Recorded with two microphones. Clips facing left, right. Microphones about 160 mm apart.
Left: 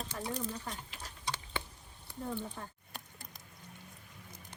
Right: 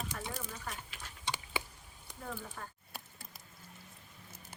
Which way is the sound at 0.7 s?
35° left (ahead or behind).